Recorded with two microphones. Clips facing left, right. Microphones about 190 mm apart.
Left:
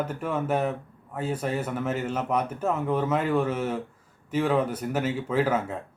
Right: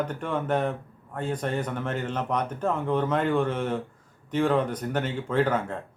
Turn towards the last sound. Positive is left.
turn(degrees=5)  # may be behind; listen again after turning